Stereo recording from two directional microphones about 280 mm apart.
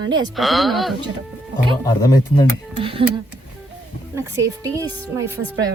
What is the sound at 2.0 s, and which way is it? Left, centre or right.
Speech, centre.